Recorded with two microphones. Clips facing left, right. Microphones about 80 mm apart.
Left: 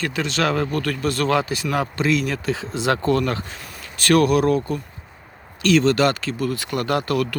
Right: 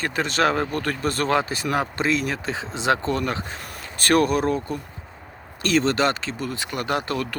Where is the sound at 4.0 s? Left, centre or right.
Right.